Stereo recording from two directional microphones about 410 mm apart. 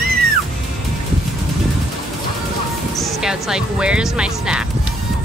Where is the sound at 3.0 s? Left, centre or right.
Centre.